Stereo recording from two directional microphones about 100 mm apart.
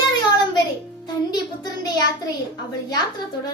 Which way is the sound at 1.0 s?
40° left (ahead or behind).